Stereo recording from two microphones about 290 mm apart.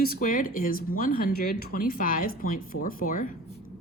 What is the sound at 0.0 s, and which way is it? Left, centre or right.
Speech, left.